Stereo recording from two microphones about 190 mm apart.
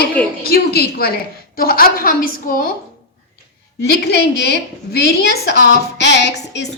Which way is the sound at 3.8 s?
60° left (ahead or behind).